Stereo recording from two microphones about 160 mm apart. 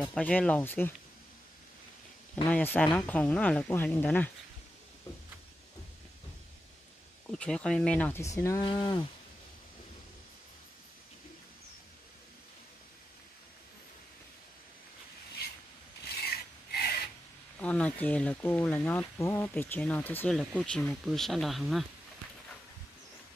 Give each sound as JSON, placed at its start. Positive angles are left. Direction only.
{"t": 0.0, "sound": "speech", "side_deg": 10}
{"t": 2.5, "sound": "speech", "side_deg": 10}
{"t": 7.2, "sound": "speech", "side_deg": 5}
{"t": 16.7, "sound": "a sound", "side_deg": 75}
{"t": 17.6, "sound": "speech", "side_deg": 10}